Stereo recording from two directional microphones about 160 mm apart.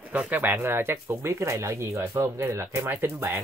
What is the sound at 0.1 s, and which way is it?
Speech, 10° right (ahead or behind).